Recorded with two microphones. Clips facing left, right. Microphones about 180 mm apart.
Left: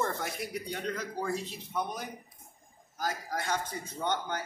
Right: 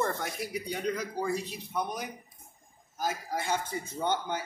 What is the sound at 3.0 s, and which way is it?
Speech, 25° right (ahead or behind).